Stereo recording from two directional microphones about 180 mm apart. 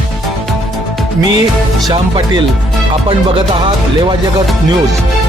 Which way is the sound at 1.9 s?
25° right (ahead or behind).